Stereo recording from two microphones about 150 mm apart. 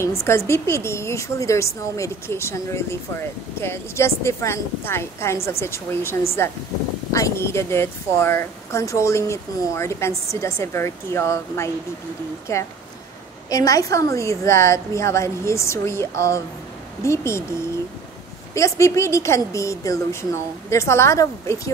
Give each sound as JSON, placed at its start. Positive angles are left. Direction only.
{"t": 0.0, "sound": "a woman's voice", "side_deg": 20}
{"t": 18.5, "sound": "a woman's voice", "side_deg": 20}